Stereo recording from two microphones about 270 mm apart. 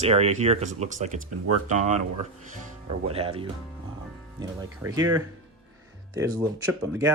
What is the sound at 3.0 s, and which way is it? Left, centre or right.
Speech, right.